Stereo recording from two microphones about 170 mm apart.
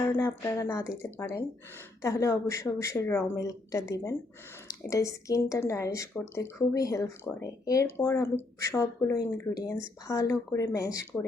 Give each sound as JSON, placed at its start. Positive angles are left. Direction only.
{"t": 0.0, "sound": "speech", "side_deg": 20}